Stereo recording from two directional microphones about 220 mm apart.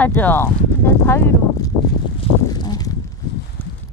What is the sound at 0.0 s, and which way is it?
Speech, 10° left (ahead or behind).